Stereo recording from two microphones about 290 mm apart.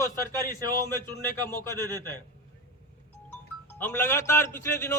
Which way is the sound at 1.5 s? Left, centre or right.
Centre.